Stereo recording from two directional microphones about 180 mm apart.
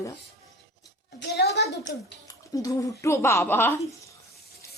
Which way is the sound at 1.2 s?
65° left (ahead or behind).